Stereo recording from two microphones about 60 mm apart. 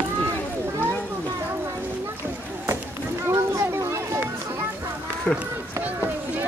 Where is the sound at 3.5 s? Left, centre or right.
Right.